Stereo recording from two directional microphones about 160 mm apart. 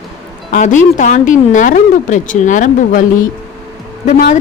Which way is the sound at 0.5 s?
50° left (ahead or behind).